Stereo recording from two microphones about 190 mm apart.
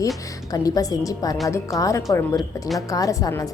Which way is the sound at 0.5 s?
20° left (ahead or behind).